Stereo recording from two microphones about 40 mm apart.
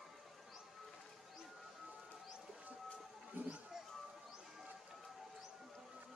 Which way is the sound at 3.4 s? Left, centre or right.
Right.